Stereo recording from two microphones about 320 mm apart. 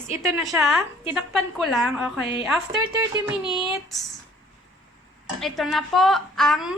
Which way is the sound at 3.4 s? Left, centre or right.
Centre.